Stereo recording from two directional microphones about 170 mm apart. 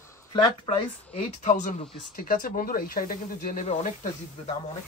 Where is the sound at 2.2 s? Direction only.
55° left (ahead or behind).